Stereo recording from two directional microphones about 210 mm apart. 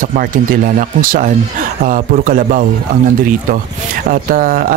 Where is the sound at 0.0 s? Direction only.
40° right (ahead or behind).